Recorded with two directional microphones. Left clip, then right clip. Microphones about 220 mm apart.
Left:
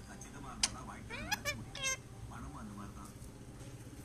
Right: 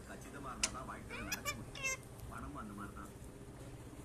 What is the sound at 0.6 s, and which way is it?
Cat, 20° left (ahead or behind).